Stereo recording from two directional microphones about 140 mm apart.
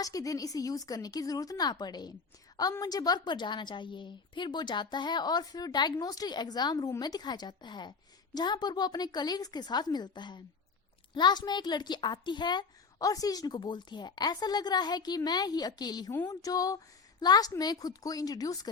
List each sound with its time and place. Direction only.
0.0 s a woman's voice: 25° left (ahead or behind)